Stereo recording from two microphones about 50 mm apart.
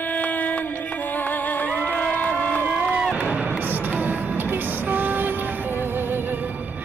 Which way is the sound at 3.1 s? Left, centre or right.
Right.